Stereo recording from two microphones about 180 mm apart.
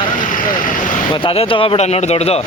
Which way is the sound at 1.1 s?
30° left (ahead or behind).